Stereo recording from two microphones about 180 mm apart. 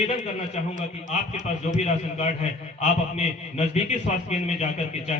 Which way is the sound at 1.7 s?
40° left (ahead or behind).